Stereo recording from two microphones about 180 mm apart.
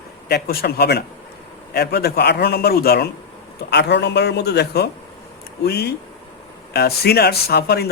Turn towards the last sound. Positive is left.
turn(degrees=65)  # may be behind; listen again after turning